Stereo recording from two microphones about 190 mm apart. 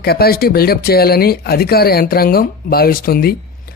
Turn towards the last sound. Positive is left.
turn(degrees=50)  # may be behind; listen again after turning